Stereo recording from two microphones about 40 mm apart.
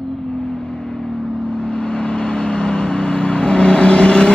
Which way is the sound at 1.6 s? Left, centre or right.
Left.